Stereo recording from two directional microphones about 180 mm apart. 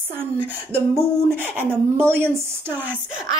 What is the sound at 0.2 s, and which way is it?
Speech, 10° right (ahead or behind).